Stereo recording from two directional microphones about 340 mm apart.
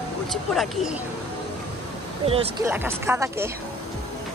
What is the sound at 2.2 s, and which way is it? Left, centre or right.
Speech, centre.